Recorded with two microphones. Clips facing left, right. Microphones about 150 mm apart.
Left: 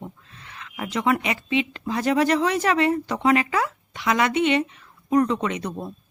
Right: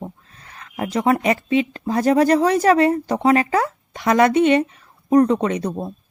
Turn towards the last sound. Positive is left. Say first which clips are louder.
# right 6 dB
turn(degrees=-40)  # may be behind; listen again after turning